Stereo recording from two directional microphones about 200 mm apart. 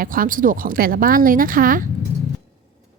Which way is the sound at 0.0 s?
45° right (ahead or behind).